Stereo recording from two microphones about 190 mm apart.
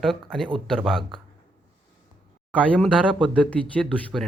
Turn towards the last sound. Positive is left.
turn(degrees=5)  # may be behind; listen again after turning